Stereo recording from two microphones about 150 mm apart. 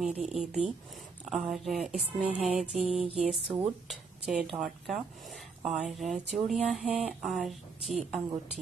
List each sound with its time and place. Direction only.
0.0 s speech: 5° right (ahead or behind)
2.9 s music: 40° right (ahead or behind)
3.2 s speech: 5° right (ahead or behind)